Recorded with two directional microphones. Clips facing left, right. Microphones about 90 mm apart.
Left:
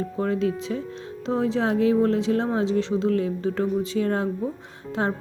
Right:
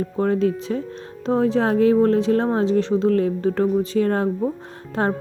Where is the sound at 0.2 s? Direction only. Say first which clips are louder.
Right 5 dB; 40° right (ahead or behind).